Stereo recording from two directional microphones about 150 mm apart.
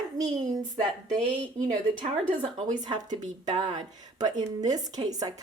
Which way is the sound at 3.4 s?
30° right (ahead or behind).